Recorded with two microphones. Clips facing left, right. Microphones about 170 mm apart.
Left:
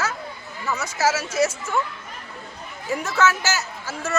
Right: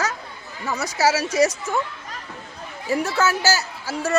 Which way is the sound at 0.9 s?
15° right (ahead or behind).